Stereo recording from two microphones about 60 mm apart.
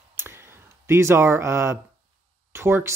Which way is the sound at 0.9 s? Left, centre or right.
Right.